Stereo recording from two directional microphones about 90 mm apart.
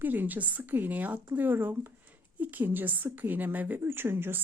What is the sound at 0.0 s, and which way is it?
A woman's voice, 20° right (ahead or behind).